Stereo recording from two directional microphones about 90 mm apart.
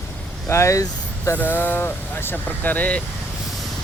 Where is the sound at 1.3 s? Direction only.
20° left (ahead or behind).